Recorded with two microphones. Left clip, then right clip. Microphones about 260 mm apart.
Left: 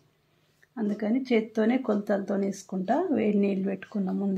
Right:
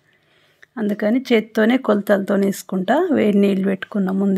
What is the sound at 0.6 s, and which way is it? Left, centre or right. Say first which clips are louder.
Speech: right 9 dB; right.